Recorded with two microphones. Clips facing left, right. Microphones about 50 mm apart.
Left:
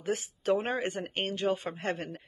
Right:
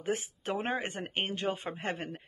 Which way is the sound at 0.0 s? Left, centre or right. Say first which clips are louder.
Left 2 dB; right.